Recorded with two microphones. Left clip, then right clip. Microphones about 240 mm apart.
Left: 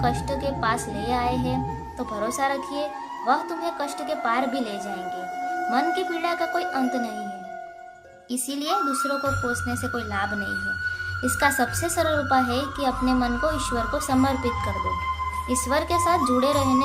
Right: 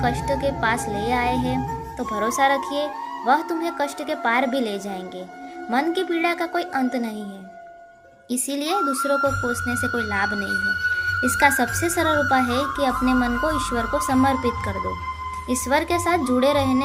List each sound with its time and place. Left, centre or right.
0.0 s a child's voice: centre
5.7 s a child's voice: centre
8.3 s a child's voice: centre
9.0 s speech: centre
9.5 s a child's voice: centre